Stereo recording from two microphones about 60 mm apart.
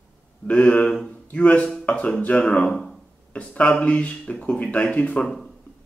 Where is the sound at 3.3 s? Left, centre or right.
Left.